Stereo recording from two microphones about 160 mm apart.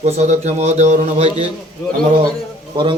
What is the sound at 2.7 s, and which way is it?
Speech, 30° right (ahead or behind).